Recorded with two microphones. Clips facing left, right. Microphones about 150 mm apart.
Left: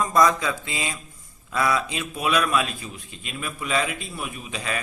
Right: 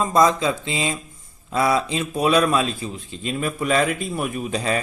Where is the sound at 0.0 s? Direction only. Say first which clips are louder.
Right 3 dB; 25° right (ahead or behind).